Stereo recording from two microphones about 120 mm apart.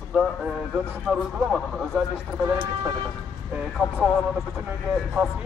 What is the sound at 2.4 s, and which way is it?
Speech, 10° right (ahead or behind).